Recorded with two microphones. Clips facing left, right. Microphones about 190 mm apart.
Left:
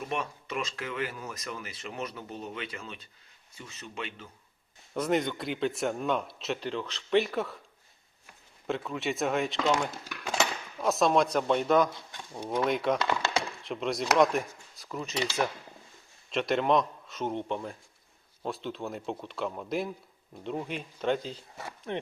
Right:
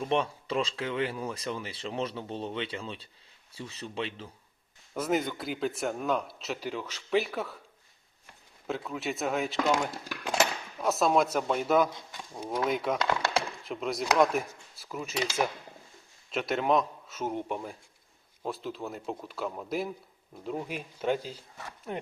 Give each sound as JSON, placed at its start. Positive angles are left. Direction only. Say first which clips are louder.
{"t": 0.1, "sound": "speech", "louder": "right 7 dB", "side_deg": -30}
{"t": 4.9, "sound": "speech", "louder": "left 1 dB", "side_deg": 0}
{"t": 8.6, "sound": "speech", "louder": "left 2 dB", "side_deg": 0}
{"t": 16.3, "sound": "speech", "louder": "left 1 dB", "side_deg": -5}